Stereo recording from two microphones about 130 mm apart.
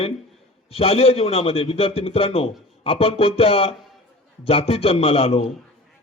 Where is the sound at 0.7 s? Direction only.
50° left (ahead or behind).